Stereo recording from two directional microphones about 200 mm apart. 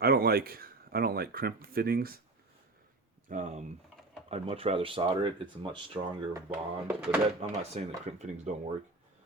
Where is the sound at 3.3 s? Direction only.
40° right (ahead or behind).